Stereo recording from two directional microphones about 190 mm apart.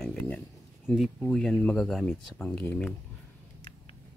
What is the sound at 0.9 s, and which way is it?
Speech, centre (ahead or behind).